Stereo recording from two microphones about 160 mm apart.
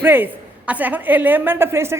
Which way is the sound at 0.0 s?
10° right (ahead or behind).